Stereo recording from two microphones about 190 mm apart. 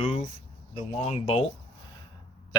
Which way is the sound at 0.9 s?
30° left (ahead or behind).